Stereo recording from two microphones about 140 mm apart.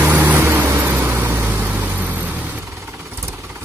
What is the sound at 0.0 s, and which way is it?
Vehicle, 10° right (ahead or behind).